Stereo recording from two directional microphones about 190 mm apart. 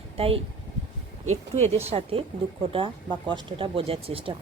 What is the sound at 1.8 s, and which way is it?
A woman's voice, 35° right (ahead or behind).